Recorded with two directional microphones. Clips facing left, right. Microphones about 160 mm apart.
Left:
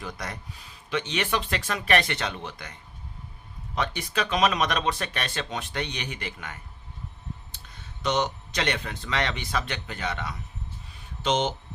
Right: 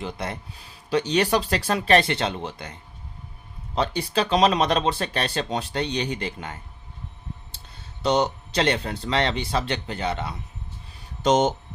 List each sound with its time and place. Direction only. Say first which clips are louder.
0.0 s speech: right 5 dB; 25° right (ahead or behind)
3.8 s speech: right 5 dB; 30° right (ahead or behind)
11.2 s speech: right 6 dB; 45° right (ahead or behind)